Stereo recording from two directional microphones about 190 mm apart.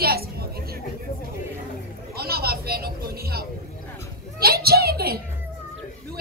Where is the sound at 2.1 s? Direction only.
55° right (ahead or behind).